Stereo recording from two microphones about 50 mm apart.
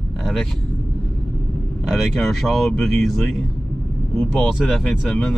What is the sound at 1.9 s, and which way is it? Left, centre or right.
Speech, centre.